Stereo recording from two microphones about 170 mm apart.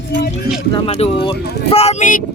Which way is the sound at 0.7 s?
35° left (ahead or behind).